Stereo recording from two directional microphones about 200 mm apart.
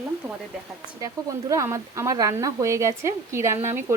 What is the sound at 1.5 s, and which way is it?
Speech, 15° right (ahead or behind).